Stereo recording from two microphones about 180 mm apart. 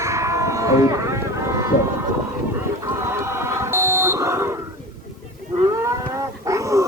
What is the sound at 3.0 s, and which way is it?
Buzzer, 15° right (ahead or behind).